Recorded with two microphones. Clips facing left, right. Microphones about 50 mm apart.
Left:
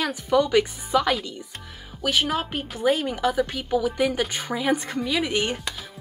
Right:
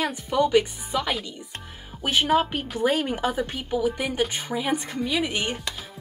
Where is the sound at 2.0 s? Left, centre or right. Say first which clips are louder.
Right 3 dB; right.